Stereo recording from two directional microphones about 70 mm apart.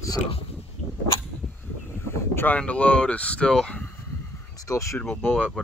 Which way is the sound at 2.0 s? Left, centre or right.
Left.